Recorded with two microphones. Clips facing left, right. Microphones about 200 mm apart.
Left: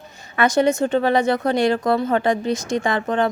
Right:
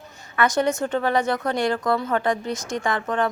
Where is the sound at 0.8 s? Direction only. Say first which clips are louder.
Left 4 dB; 25° left (ahead or behind).